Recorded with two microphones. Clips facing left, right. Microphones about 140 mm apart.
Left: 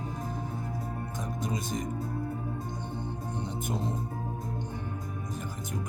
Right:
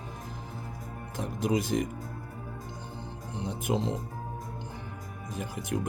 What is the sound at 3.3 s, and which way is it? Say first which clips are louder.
Music: right 5 dB; 90° right.